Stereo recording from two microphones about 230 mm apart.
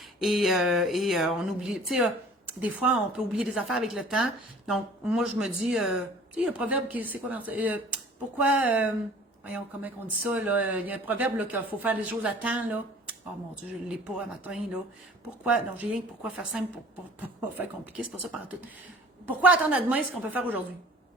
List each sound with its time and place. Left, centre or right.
0.2 s speech: centre
17.9 s speech: centre